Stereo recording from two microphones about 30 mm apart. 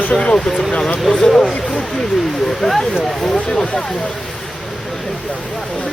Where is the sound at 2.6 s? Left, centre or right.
Left.